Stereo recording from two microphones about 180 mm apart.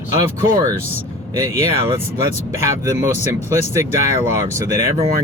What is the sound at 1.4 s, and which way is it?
Speech, 15° right (ahead or behind).